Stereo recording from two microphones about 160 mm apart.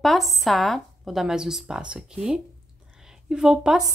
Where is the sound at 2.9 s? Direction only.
5° right (ahead or behind).